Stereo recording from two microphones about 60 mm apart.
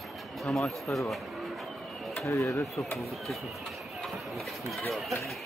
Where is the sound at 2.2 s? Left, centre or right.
Left.